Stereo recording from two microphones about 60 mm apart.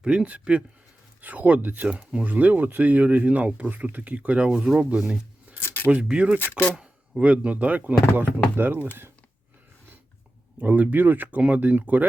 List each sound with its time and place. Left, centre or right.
0.0 s speech: centre
4.9 s speech: centre
5.6 s a sound: left
5.9 s speech: right
6.4 s speech: left
7.2 s speech: right
10.6 s speech: right